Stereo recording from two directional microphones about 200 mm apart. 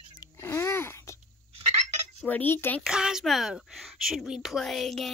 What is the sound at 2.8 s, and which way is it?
A woman's voice, 5° right (ahead or behind).